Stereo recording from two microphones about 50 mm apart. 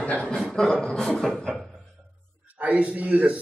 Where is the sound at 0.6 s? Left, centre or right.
Centre.